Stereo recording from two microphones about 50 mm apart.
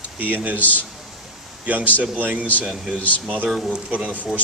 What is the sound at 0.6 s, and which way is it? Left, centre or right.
Speech, left.